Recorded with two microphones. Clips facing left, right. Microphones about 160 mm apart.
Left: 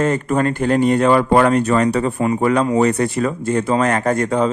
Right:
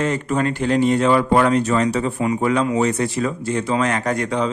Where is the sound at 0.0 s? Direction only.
50° left (ahead or behind).